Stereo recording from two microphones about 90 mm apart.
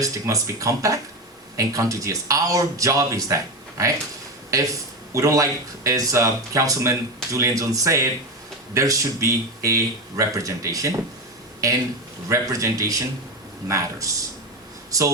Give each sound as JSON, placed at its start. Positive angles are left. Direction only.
{"t": 0.0, "sound": "speech", "side_deg": -40}
{"t": 12.3, "sound": "speech", "side_deg": -35}